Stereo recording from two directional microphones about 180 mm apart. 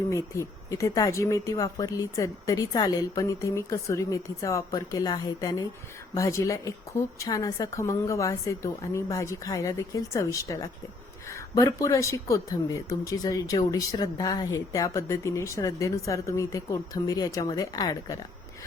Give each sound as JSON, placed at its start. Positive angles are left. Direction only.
{"t": 0.1, "sound": "speech", "side_deg": 15}